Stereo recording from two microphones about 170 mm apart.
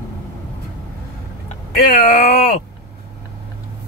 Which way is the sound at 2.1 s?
55° left (ahead or behind).